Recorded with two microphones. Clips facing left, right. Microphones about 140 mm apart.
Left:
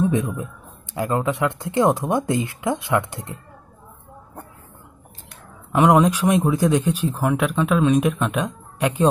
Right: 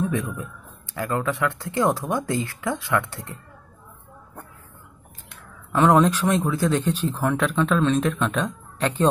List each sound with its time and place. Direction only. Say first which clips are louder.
0.0 s a man's voice: left 5 dB; 20° left (ahead or behind)
5.7 s speech: left 2 dB; 15° left (ahead or behind)